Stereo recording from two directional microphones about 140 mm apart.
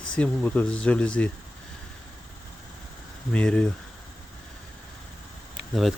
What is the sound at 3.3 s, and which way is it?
Speech, 5° left (ahead or behind).